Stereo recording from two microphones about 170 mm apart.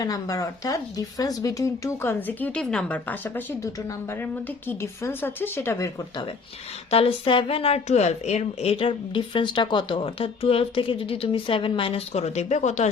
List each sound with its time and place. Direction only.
0.0 s speech: 20° left (ahead or behind)
6.9 s a woman's voice: 30° left (ahead or behind)